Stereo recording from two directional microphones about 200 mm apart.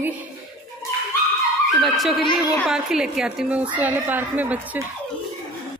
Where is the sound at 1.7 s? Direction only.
Centre (ahead or behind).